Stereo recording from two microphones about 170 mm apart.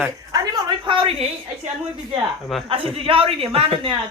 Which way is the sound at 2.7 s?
30° right (ahead or behind).